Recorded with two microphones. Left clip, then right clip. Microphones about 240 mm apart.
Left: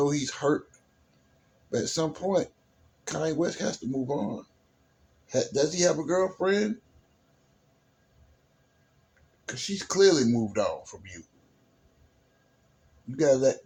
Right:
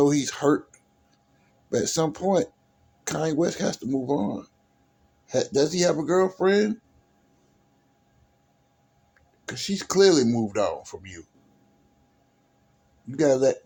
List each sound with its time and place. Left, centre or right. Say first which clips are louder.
0.0 s speech: right 5 dB; right
1.7 s speech: right 4 dB; right
9.5 s speech: right 3 dB; right
13.1 s speech: right 2 dB; right